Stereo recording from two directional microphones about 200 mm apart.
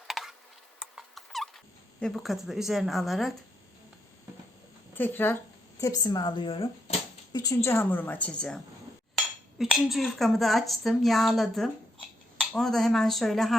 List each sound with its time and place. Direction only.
0.1 s a sound: centre (ahead or behind)
0.8 s rodents: centre (ahead or behind)
4.9 s a woman's voice: 10° left (ahead or behind); by 6.9 s 25° left (ahead or behind)
7.3 s a woman's voice: 15° left (ahead or behind)